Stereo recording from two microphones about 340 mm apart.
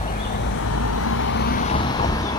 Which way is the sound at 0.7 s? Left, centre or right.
Left.